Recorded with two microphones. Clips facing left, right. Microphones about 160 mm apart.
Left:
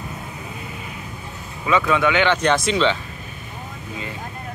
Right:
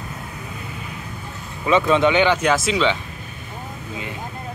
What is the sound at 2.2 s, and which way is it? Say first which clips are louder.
Speech: even; 5° right (ahead or behind).